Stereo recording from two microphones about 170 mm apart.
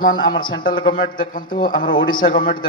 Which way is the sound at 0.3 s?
30° left (ahead or behind).